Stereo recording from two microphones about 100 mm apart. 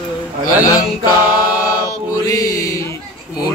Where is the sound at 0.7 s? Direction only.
40° left (ahead or behind).